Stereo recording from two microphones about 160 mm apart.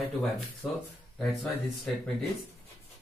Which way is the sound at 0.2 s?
Centre (ahead or behind).